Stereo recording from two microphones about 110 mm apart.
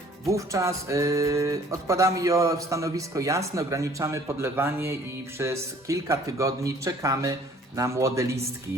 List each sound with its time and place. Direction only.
0.3 s music: 25° right (ahead or behind)